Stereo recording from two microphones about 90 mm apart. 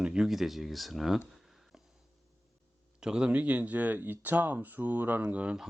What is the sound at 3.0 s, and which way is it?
Speech, 10° right (ahead or behind).